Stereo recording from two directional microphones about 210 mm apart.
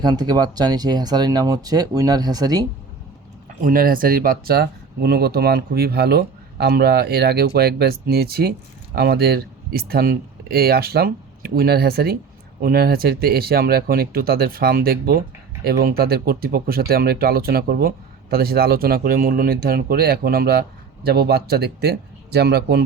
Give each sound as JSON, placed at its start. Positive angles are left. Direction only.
{"t": 0.0, "sound": "speech", "side_deg": -20}
{"t": 3.6, "sound": "speech", "side_deg": -40}